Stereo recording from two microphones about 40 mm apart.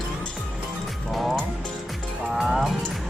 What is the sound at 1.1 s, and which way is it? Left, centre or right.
Music, centre.